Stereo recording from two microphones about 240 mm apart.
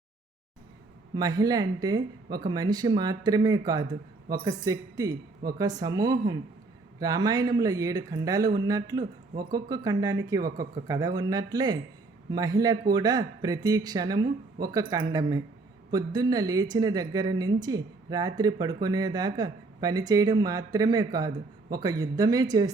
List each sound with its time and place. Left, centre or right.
1.1 s a woman's voice: centre